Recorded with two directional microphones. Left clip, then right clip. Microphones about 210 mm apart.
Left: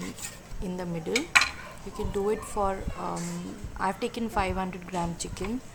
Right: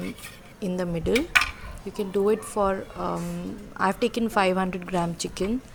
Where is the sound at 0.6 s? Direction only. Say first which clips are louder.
Right 6 dB; 25° right (ahead or behind).